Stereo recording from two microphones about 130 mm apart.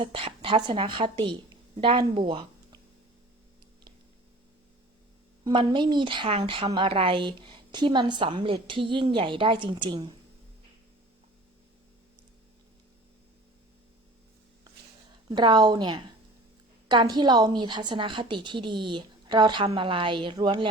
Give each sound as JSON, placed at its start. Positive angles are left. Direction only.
{"t": 0.0, "sound": "a woman's voice", "side_deg": -45}
{"t": 5.5, "sound": "a woman's voice", "side_deg": -40}
{"t": 15.3, "sound": "a woman's voice", "side_deg": -35}